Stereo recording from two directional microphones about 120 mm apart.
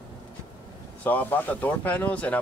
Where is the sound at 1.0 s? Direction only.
15° left (ahead or behind).